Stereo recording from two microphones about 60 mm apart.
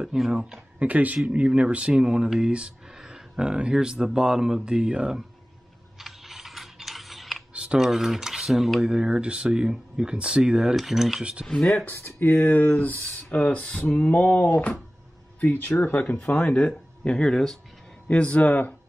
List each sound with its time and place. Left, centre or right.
0.0 s speech: centre
0.7 s speech: right
5.9 s a sound: centre
7.5 s typing: centre
7.8 s cutlery: centre
8.8 s speech: centre
10.8 s cutlery: centre
11.4 s speech: centre
11.8 s speech: left